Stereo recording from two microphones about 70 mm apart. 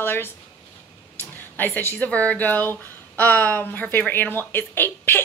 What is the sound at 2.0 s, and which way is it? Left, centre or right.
Speech, centre.